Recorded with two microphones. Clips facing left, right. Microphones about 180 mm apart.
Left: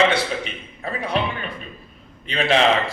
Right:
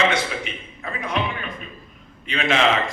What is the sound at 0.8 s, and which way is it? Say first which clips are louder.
Speech: left 3 dB; 35° left (ahead or behind).